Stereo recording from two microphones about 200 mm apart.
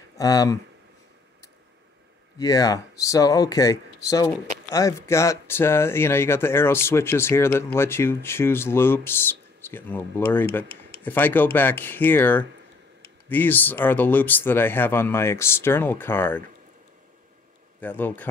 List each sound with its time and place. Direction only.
0.2 s speech: 15° left (ahead or behind)
2.3 s speech: 15° left (ahead or behind)
17.7 s speech: 10° left (ahead or behind)